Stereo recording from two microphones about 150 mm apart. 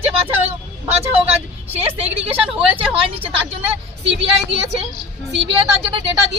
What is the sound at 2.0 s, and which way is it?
Speech, 40° right (ahead or behind).